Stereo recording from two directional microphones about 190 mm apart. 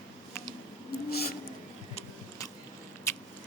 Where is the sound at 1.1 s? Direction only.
55° left (ahead or behind).